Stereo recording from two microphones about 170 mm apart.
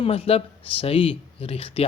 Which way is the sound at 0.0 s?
35° left (ahead or behind).